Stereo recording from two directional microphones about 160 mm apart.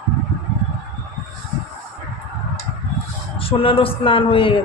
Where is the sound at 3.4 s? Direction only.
35° left (ahead or behind).